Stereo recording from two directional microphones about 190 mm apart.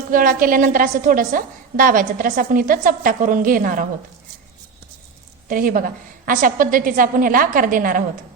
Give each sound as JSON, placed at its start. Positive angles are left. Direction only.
{"t": 0.1, "sound": "a woman's voice", "side_deg": -45}
{"t": 5.5, "sound": "a woman's voice", "side_deg": -45}